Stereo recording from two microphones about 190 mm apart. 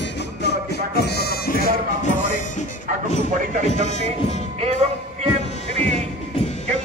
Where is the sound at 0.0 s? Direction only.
60° left (ahead or behind).